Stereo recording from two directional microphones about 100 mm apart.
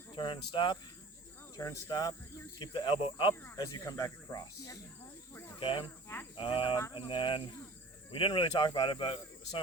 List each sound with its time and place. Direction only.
0.2 s speech: 55° left (ahead or behind)
1.5 s speech: 35° left (ahead or behind)
2.6 s speech: 50° left (ahead or behind)
3.5 s speech: 35° left (ahead or behind)
5.3 s snake: 25° left (ahead or behind)
5.5 s speech: 65° left (ahead or behind)